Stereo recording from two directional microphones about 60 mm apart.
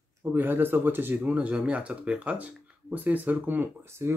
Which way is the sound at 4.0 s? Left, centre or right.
Right.